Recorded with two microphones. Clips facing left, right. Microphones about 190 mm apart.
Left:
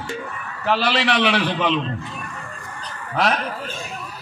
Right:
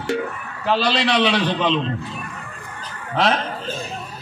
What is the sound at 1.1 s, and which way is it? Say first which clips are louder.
Speech: right 1 dB; 10° left (ahead or behind).